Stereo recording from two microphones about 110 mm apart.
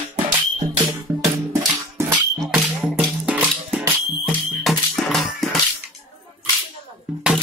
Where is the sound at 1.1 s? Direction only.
25° right (ahead or behind).